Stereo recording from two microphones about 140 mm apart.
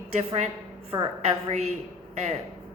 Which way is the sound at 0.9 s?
30° right (ahead or behind).